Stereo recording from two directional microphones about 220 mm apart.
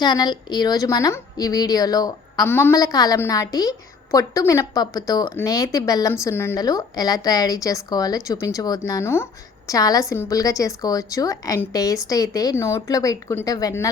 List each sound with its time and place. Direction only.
0.0 s a woman's voice: 20° left (ahead or behind)